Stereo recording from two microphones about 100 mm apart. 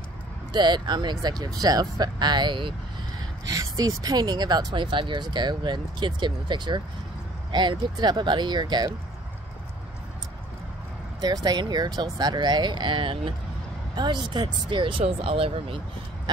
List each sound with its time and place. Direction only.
0.5 s speech: 45° right (ahead or behind)
3.4 s speech: 35° right (ahead or behind)
11.1 s speech: 40° right (ahead or behind); by 13.3 s 65° right (ahead or behind)
13.9 s speech: 50° right (ahead or behind); by 15.8 s 65° right (ahead or behind)